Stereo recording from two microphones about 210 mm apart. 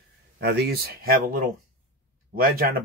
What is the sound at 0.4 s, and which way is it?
Speech, 50° right (ahead or behind).